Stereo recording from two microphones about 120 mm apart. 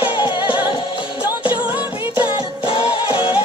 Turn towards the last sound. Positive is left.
turn(degrees=45)  # may be behind; listen again after turning